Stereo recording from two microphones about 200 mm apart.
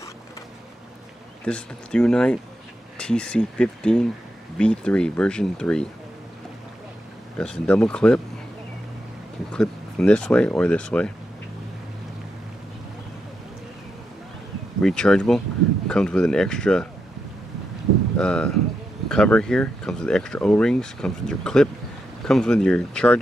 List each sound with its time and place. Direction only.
1.4 s speech: 5° left (ahead or behind)
7.3 s speech: 5° left (ahead or behind)
9.5 s speech: 5° left (ahead or behind)
14.8 s speech: 5° left (ahead or behind)
18.1 s speech: 5° left (ahead or behind)